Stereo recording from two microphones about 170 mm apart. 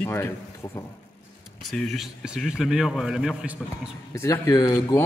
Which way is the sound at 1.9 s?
Centre (ahead or behind).